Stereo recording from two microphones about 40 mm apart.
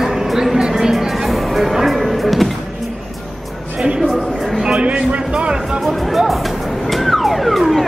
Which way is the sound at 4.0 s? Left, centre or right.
Centre.